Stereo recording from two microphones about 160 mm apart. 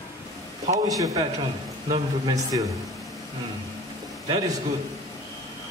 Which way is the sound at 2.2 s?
20° right (ahead or behind).